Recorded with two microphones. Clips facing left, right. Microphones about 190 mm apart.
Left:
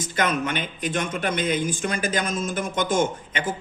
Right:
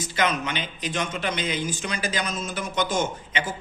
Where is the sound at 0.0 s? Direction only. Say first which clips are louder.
Left 1 dB; 50° left (ahead or behind).